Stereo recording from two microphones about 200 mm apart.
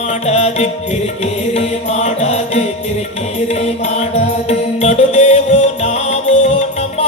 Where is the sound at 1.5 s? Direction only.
35° left (ahead or behind).